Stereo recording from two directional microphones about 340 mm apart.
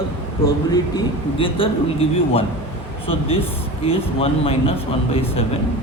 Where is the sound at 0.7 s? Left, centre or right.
Centre.